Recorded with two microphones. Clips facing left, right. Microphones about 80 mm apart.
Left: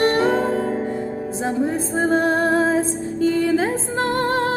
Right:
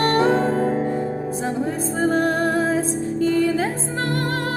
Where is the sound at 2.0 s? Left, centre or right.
Left.